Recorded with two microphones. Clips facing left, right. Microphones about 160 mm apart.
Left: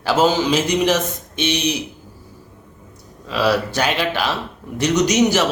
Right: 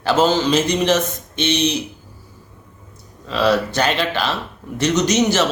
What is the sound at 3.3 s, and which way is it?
Speech, 5° left (ahead or behind).